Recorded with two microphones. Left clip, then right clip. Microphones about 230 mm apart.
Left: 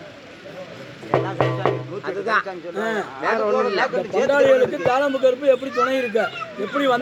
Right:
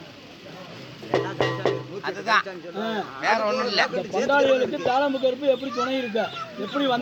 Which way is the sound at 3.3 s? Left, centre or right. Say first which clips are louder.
Left 3 dB; right.